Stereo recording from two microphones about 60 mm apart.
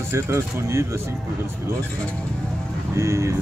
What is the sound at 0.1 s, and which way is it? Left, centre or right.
Speech, right.